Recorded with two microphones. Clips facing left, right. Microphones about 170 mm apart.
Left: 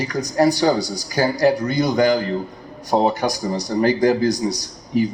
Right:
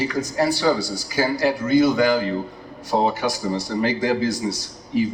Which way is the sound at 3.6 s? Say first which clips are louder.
Left 6 dB; 45° left (ahead or behind).